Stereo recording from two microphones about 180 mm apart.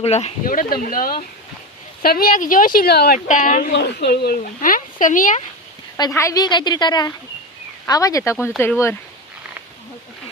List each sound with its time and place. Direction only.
0.0 s speech: 35° left (ahead or behind)
0.4 s speech: 50° left (ahead or behind)
3.2 s speech: 45° left (ahead or behind)
3.7 s speech: 70° left (ahead or behind); by 5.4 s 45° left (ahead or behind)
6.0 s a woman's voice: 15° left (ahead or behind)